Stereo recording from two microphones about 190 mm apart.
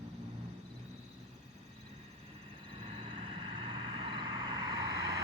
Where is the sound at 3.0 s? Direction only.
25° right (ahead or behind).